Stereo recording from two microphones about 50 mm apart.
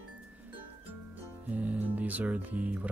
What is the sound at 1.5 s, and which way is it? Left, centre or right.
Speech, right.